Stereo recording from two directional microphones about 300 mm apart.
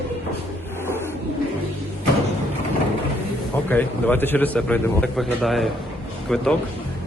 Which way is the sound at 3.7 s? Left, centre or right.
Centre.